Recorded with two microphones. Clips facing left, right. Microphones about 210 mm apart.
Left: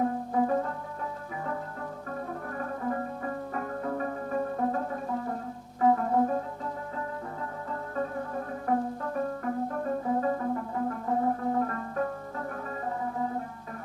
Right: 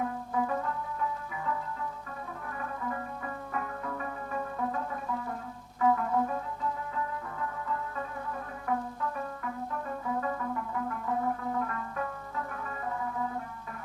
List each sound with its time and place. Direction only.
0.0 s music: 35° left (ahead or behind)
8.6 s music: 40° left (ahead or behind)